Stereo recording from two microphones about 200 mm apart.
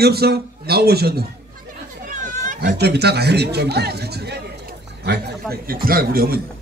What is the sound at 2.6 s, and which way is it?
A man's voice, 55° right (ahead or behind).